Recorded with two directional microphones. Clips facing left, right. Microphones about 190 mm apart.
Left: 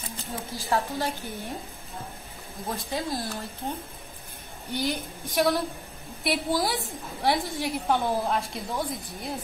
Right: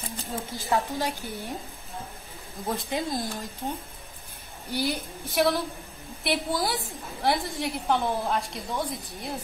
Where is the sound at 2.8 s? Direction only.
20° right (ahead or behind).